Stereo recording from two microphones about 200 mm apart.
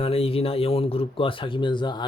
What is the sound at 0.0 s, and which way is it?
Speech, 30° left (ahead or behind).